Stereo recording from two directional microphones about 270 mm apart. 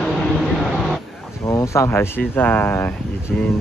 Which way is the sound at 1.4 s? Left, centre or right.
Centre.